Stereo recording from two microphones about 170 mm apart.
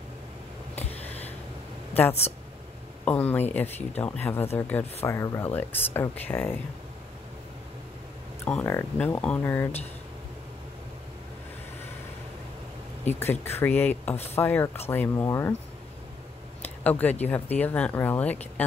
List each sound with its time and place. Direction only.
0.7 s a sound: 40° left (ahead or behind)
3.1 s speech: 10° left (ahead or behind)
8.5 s speech: 10° left (ahead or behind)
13.0 s speech: 10° left (ahead or behind)
16.8 s speech: 10° left (ahead or behind)